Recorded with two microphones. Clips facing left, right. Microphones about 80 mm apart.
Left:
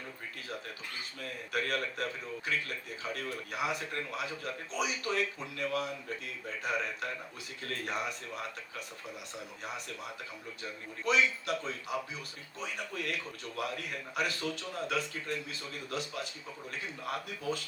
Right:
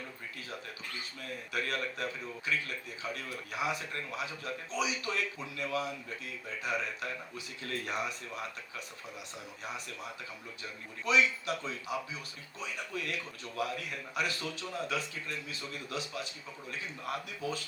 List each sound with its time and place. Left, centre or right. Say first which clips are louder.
1.2 s a man's voice: left 2 dB; left
10.6 s a man's voice: left 4 dB; left